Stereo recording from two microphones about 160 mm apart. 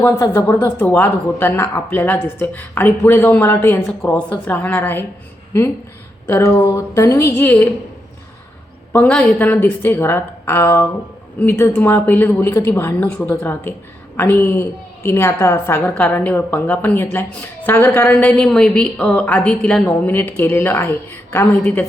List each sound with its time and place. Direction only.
0.2 s a woman's voice: 15° left (ahead or behind)
6.2 s a woman's voice: 15° left (ahead or behind)
8.9 s a woman's voice: 10° left (ahead or behind)